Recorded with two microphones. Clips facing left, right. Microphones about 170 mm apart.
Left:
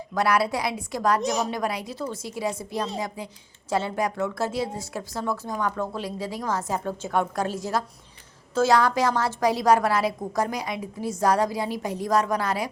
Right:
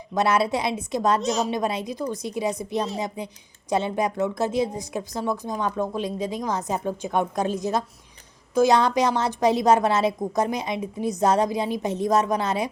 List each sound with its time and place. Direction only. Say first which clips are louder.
0.1 s a woman's voice: right 2 dB; 20° right (ahead or behind)